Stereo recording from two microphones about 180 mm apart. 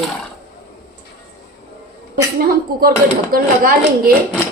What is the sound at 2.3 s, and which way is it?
A woman's voice, 55° right (ahead or behind).